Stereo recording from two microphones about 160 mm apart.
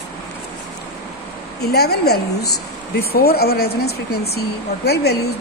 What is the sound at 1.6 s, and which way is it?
Speech, 90° left.